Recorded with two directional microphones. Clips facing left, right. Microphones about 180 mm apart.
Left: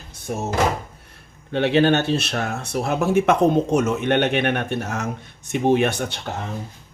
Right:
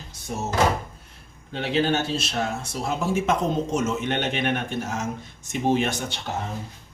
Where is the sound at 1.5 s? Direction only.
65° left (ahead or behind).